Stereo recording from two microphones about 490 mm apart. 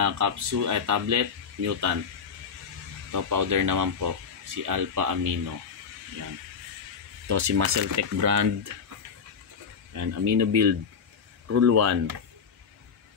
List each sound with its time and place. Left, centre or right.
0.0 s speech: right
3.1 s speech: right
7.2 s speech: right
9.9 s speech: right